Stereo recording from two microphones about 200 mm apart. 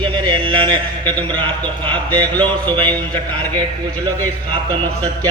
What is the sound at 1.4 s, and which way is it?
Mantra, 25° right (ahead or behind).